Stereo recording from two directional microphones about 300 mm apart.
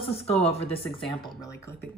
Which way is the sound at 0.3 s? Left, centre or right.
Left.